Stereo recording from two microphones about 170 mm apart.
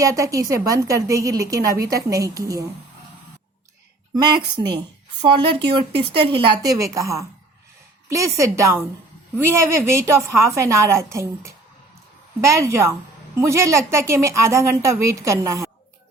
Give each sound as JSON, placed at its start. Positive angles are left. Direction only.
{"t": 0.0, "sound": "speech", "side_deg": -20}
{"t": 4.1, "sound": "a woman's voice", "side_deg": -25}